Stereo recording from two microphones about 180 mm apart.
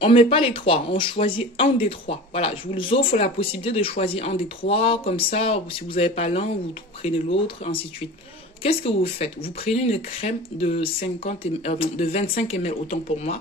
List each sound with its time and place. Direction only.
0.0 s speech: 30° left (ahead or behind)